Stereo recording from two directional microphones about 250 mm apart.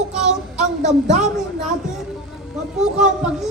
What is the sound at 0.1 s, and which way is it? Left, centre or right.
Child singing, right.